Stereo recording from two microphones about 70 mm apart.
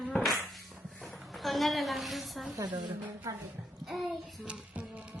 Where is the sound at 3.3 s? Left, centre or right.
Right.